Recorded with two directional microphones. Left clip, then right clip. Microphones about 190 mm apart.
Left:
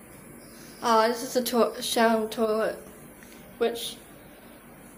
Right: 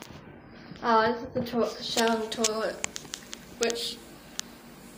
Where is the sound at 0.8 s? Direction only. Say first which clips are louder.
Left 1 dB; 15° left (ahead or behind).